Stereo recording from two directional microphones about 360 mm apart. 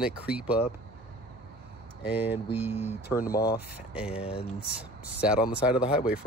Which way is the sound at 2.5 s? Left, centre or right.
Centre.